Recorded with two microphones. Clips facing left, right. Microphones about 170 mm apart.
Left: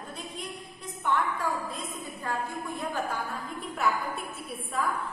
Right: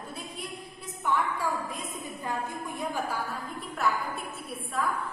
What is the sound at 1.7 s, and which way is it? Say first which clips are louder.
A woman's voice: even; 15° right (ahead or behind).